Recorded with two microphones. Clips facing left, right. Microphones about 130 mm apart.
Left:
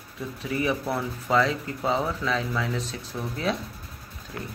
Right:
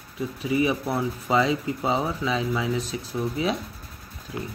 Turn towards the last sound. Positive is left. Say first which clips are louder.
# right 3 dB
turn(degrees=-10)  # may be behind; listen again after turning